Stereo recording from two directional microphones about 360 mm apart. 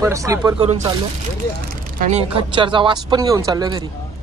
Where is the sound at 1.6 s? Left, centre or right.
Right.